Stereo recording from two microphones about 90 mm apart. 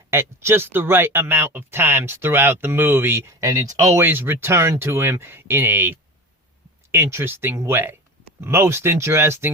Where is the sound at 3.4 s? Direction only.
40° right (ahead or behind).